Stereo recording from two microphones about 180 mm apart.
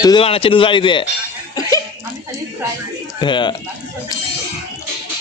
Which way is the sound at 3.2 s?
25° left (ahead or behind).